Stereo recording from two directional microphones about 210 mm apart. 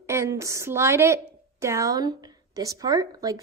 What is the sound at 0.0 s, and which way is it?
A woman's voice, 15° right (ahead or behind).